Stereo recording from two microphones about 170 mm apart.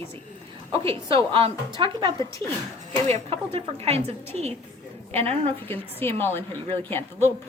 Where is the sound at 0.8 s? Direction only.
35° right (ahead or behind).